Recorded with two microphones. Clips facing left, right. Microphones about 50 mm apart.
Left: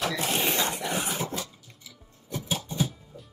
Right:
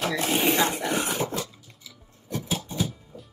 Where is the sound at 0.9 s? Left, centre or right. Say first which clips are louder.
Right 3 dB; right.